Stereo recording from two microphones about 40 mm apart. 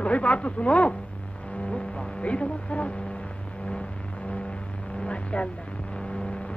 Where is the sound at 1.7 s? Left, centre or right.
Left.